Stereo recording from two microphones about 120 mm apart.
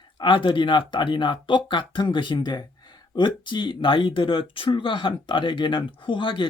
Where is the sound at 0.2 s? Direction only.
45° left (ahead or behind).